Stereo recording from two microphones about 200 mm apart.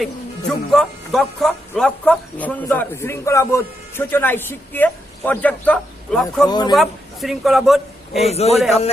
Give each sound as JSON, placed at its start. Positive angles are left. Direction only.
{"t": 0.0, "sound": "speech", "side_deg": 0}
{"t": 6.5, "sound": "speech", "side_deg": 20}
{"t": 6.7, "sound": "a man's voice", "side_deg": 0}
{"t": 8.3, "sound": "a man's voice", "side_deg": 30}